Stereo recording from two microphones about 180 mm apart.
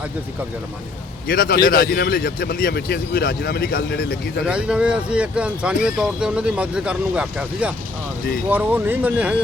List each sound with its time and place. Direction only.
1.3 s speech: 55° left (ahead or behind)
4.4 s speech: 5° right (ahead or behind)